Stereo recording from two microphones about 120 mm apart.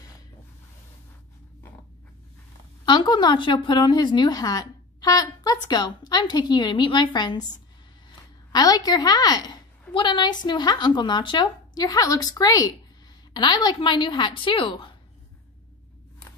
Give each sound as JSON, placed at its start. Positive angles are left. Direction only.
{"t": 2.8, "sound": "speech", "side_deg": 40}
{"t": 8.5, "sound": "a woman's voice", "side_deg": 35}